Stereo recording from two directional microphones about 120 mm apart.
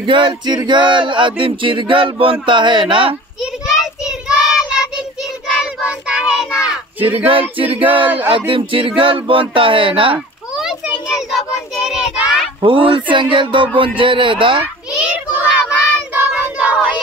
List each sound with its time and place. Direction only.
0.0 s male singing: 40° right (ahead or behind)
2.4 s speech: 40° right (ahead or behind)
3.6 s child singing: 5° right (ahead or behind)
7.2 s male singing: 50° right (ahead or behind)
10.5 s child singing: 5° right (ahead or behind)
12.6 s male singing: 45° right (ahead or behind)
15.0 s child singing: 10° right (ahead or behind)